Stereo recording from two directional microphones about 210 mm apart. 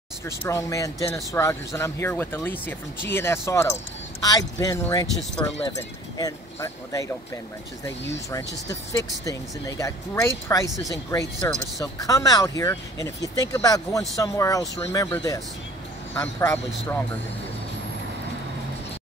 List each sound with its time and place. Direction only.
0.2 s speech: 15° left (ahead or behind)
8.6 s speech: 15° left (ahead or behind)